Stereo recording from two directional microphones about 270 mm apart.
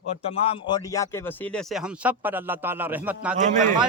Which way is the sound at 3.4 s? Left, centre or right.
Right.